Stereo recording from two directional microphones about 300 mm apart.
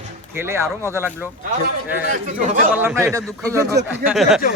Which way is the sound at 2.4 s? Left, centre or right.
Right.